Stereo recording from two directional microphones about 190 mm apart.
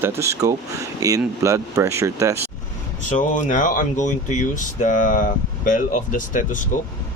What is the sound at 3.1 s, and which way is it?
Speech, 40° left (ahead or behind).